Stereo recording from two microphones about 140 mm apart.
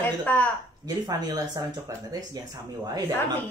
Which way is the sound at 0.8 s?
30° right (ahead or behind).